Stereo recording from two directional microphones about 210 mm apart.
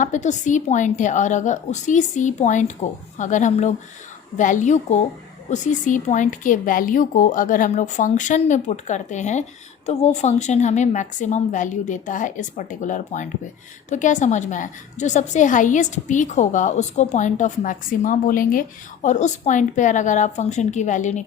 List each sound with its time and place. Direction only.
0.0 s a woman's voice: 35° left (ahead or behind)